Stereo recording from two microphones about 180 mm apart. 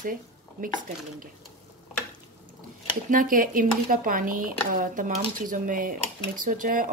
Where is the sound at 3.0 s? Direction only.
50° right (ahead or behind).